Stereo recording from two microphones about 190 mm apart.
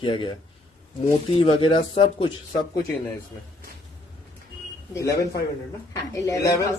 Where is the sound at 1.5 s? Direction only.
25° left (ahead or behind).